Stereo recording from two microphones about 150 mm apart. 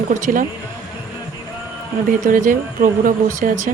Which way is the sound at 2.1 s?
65° right (ahead or behind).